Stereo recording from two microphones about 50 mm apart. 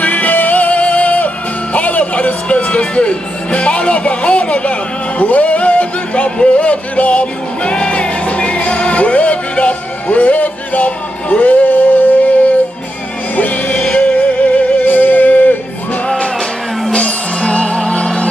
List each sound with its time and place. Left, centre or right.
0.0 s music: left
5.2 s speech: left
13.4 s music: left
16.9 s music: left